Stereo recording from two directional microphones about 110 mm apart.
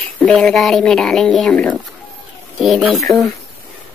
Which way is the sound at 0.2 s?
5° left (ahead or behind).